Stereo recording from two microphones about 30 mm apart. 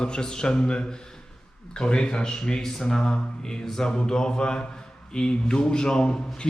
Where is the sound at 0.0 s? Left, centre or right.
Left.